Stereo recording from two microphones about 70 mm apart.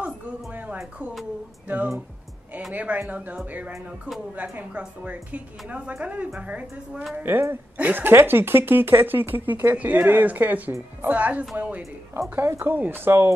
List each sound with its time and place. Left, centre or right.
2.7 s a woman's voice: right
7.2 s speech: right
7.7 s a woman's voice: centre
8.0 s speech: right
12.2 s speech: right